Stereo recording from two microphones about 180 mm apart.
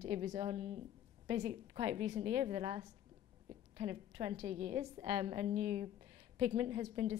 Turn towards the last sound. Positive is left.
turn(degrees=-35)  # may be behind; listen again after turning